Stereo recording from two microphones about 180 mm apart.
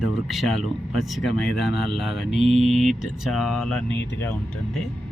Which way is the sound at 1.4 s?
65° left (ahead or behind).